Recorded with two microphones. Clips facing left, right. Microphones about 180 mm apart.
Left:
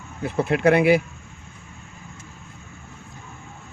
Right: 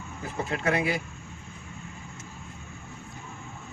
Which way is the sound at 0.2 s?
70° left (ahead or behind).